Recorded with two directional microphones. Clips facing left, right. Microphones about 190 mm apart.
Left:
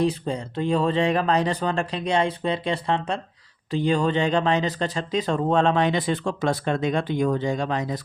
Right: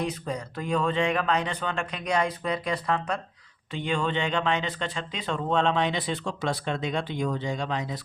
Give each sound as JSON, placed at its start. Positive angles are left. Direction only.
{"t": 0.0, "sound": "speech", "side_deg": 30}